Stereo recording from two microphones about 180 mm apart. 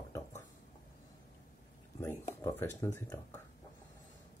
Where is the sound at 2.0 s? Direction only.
15° left (ahead or behind).